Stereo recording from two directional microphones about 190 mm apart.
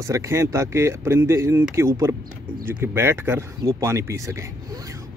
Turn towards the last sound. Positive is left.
turn(degrees=-15)  # may be behind; listen again after turning